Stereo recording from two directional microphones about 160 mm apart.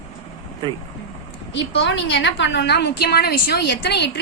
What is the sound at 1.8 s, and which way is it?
A woman's voice, 90° left.